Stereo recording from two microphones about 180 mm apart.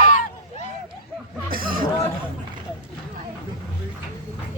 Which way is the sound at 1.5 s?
50° right (ahead or behind).